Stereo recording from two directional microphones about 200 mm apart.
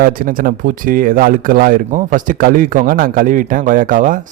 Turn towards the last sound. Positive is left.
turn(degrees=-40)  # may be behind; listen again after turning